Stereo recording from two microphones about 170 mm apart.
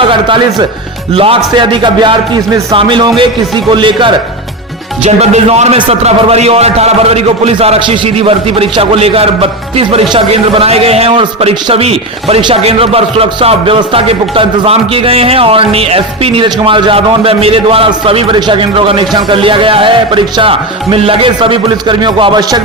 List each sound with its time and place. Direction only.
0.1 s a man's voice: 30° right (ahead or behind)
5.0 s a man's voice: 40° right (ahead or behind)